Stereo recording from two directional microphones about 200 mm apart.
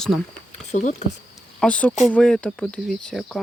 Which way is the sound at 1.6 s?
5° left (ahead or behind).